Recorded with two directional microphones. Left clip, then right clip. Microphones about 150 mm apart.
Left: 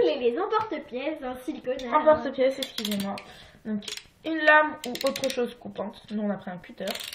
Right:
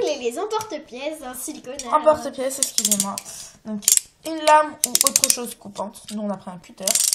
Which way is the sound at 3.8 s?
35° right (ahead or behind).